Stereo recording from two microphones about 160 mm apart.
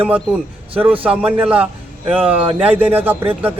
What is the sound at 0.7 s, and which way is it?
A man's voice, 10° right (ahead or behind).